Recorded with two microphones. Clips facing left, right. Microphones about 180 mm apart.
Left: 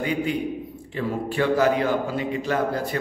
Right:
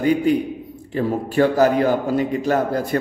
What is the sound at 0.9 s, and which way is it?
A man's voice, 40° right (ahead or behind).